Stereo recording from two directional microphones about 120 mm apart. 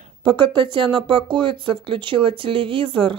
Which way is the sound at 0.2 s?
40° right (ahead or behind).